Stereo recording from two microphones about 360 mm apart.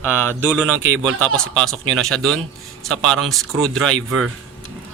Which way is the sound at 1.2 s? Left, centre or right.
Centre.